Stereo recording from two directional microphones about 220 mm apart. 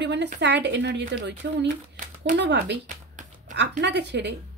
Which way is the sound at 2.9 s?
35° right (ahead or behind).